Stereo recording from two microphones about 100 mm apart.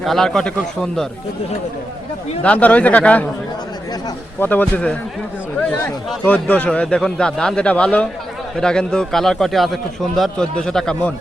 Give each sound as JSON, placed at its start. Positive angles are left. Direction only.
{"t": 0.0, "sound": "a man's voice", "side_deg": 0}
{"t": 2.4, "sound": "speech", "side_deg": 15}
{"t": 4.4, "sound": "speech", "side_deg": 20}
{"t": 6.2, "sound": "speech", "side_deg": 15}